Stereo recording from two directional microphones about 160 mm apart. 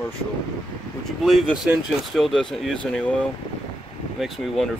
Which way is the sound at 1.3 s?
Centre (ahead or behind).